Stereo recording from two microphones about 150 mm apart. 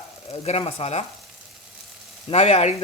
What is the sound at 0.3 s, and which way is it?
Stir, 45° left (ahead or behind).